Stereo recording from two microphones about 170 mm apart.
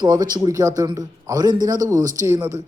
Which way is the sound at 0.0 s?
25° right (ahead or behind).